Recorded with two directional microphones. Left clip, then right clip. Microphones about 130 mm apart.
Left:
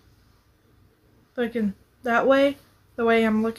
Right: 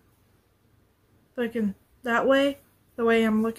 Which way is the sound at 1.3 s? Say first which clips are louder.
Left 2 dB; centre (ahead or behind).